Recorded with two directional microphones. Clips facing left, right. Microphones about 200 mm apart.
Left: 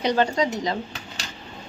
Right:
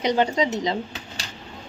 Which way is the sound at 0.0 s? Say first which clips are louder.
Even; 20° right (ahead or behind).